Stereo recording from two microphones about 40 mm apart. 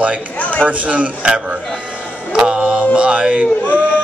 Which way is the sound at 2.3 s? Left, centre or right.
Right.